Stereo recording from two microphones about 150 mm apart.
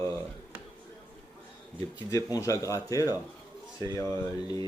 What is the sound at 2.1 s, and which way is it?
Speech, 20° left (ahead or behind).